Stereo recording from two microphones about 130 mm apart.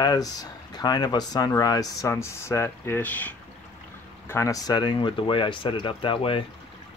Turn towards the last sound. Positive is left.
turn(degrees=45)  # may be behind; listen again after turning